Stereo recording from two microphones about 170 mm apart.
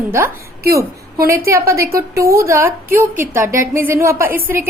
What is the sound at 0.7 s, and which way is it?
A woman's voice, 20° right (ahead or behind).